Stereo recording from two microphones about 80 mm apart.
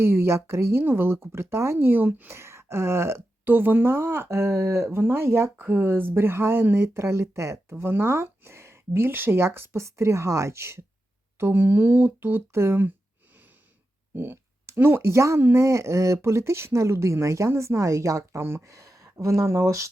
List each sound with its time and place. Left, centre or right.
0.0 s speech: right
2.3 s speech: right
14.2 s speech: right